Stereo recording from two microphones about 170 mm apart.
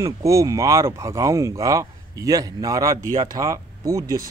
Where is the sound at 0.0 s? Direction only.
20° right (ahead or behind).